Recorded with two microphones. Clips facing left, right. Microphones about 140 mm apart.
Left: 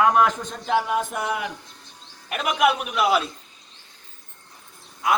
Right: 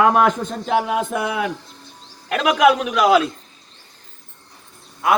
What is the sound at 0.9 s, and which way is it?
A man's voice, 90° right.